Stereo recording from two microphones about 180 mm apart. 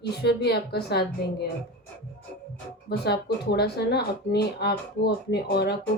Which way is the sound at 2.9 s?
65° left (ahead or behind).